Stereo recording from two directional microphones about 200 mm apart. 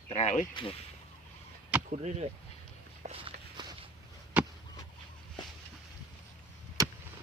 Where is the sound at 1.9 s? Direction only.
35° right (ahead or behind).